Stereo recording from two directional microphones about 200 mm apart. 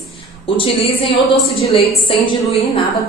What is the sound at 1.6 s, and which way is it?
Speech, 30° left (ahead or behind).